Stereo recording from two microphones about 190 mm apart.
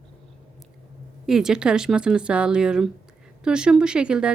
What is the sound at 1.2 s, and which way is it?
Speech, 5° right (ahead or behind).